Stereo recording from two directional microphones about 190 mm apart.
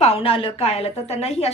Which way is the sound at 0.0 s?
30° left (ahead or behind).